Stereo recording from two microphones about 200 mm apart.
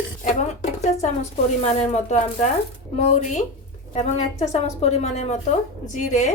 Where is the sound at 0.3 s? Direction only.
35° left (ahead or behind).